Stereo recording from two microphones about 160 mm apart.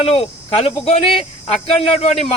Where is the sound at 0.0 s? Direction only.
35° left (ahead or behind).